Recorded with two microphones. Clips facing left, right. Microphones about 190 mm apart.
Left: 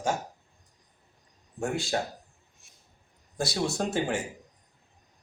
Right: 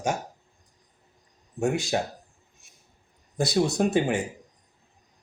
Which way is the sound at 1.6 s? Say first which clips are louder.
Right 4 dB; 20° right (ahead or behind).